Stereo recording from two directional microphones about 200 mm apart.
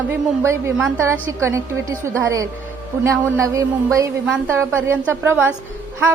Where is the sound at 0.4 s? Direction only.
10° right (ahead or behind).